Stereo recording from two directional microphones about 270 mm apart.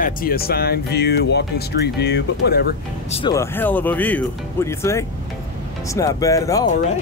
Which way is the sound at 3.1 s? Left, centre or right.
Centre.